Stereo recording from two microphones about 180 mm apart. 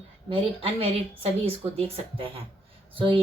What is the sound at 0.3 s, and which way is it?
A woman's voice, 35° right (ahead or behind).